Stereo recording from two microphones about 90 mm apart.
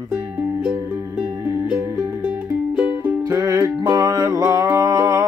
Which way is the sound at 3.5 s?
35° right (ahead or behind).